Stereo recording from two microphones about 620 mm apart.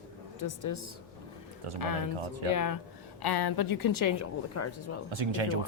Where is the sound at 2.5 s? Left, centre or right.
Left.